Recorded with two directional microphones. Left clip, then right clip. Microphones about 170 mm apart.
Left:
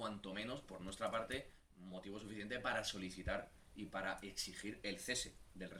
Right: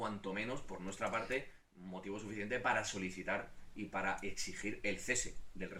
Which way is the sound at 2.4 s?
35° left (ahead or behind).